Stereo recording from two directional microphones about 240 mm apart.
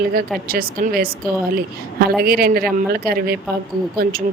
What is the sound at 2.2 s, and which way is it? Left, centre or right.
Speech, right.